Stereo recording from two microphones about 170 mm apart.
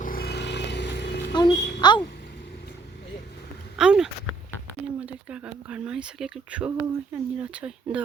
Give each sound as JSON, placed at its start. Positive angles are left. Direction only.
{"t": 0.0, "sound": "vehicle", "side_deg": 60}
{"t": 1.3, "sound": "a child's voice", "side_deg": 25}
{"t": 3.8, "sound": "a sound", "side_deg": -5}
{"t": 5.0, "sound": "speech", "side_deg": -5}